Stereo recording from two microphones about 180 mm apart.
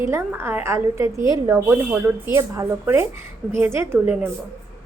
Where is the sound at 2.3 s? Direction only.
15° right (ahead or behind).